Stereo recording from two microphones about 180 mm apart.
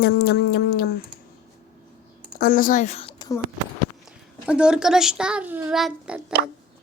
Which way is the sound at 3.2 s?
20° left (ahead or behind).